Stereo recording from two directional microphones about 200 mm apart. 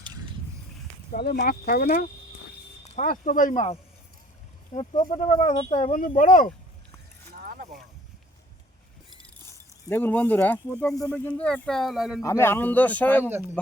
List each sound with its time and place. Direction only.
1.1 s speech: 50° left (ahead or behind); by 6.0 s 30° left (ahead or behind)
6.0 s speech: 40° left (ahead or behind)
7.3 s vehicle: 50° right (ahead or behind)
9.5 s speech: 10° left (ahead or behind)
12.2 s speech: 15° left (ahead or behind)